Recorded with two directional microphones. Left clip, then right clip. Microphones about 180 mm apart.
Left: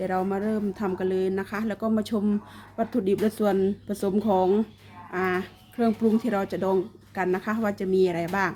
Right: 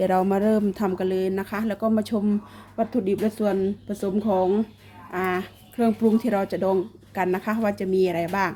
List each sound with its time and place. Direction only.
0.0 s a woman's voice: 30° right (ahead or behind); by 8.5 s 5° right (ahead or behind)